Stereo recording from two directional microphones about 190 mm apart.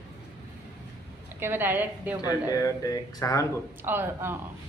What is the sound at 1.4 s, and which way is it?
Speech, 10° right (ahead or behind).